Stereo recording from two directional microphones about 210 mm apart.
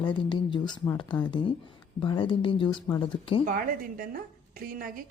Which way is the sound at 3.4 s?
40° right (ahead or behind).